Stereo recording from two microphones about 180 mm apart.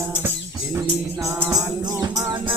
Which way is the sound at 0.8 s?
20° right (ahead or behind).